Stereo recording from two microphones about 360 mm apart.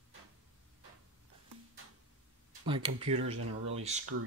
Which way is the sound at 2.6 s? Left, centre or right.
Centre.